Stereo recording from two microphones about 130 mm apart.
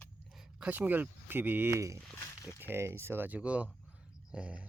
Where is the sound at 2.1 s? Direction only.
20° left (ahead or behind).